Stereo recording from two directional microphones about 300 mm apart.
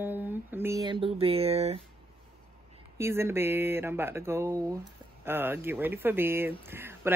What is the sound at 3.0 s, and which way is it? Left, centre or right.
Speech, centre.